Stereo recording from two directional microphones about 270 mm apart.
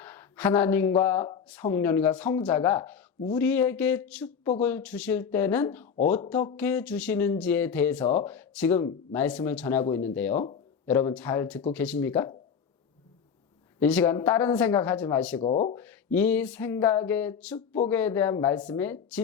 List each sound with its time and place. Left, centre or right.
0.0 s speech: centre
13.7 s speech: centre
15.4 s speech: left
15.7 s speech: centre